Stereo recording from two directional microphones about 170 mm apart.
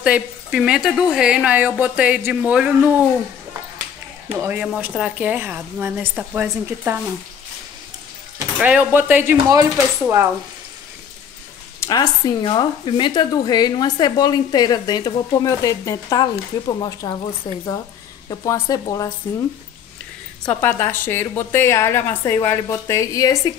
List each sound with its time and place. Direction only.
0.0 s speech: 5° right (ahead or behind)
4.4 s speech: 10° right (ahead or behind)
8.5 s speech: 10° right (ahead or behind)
11.8 s speech: 20° left (ahead or behind)
18.3 s speech: 20° left (ahead or behind)
20.4 s a woman's voice: 10° left (ahead or behind)